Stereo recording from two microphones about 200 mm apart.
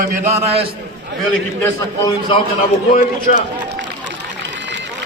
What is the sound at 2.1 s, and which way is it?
Speech, 25° left (ahead or behind).